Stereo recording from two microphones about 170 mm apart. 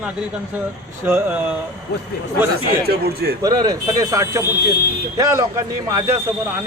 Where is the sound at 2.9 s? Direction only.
70° right (ahead or behind).